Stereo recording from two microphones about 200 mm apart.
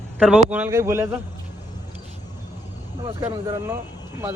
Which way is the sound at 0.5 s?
10° right (ahead or behind).